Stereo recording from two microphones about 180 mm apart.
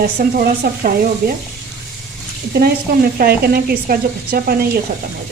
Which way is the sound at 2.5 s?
55° right (ahead or behind).